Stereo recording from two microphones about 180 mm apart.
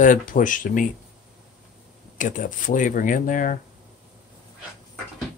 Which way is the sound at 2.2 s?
45° left (ahead or behind).